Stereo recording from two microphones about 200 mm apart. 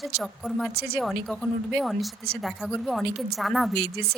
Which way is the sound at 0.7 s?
50° right (ahead or behind).